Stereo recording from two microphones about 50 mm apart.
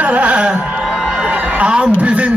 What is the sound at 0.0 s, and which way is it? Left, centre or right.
Music, right.